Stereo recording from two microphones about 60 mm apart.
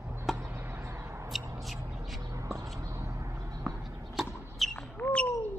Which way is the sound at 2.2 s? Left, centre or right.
Right.